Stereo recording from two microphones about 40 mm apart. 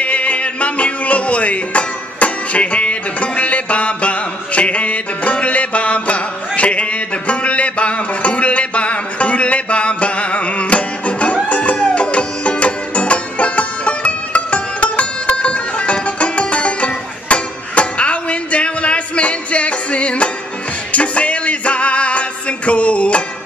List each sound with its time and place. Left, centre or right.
0.0 s music: left